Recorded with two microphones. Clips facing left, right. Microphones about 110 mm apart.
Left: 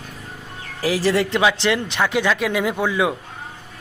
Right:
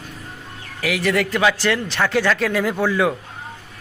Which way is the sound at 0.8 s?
30° left (ahead or behind).